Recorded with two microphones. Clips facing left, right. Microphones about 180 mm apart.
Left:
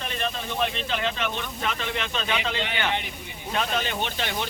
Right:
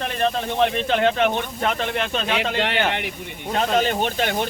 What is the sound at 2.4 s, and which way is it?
Speech, 60° right (ahead or behind).